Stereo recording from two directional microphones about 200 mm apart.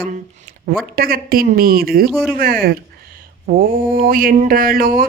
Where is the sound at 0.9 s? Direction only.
45° right (ahead or behind).